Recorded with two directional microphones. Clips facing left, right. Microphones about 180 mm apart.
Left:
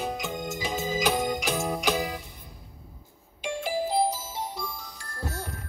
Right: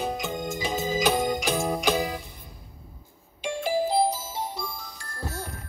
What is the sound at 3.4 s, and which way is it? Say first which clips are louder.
Music: right 3 dB; 30° right (ahead or behind).